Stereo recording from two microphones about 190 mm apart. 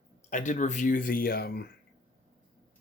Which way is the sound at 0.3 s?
40° left (ahead or behind).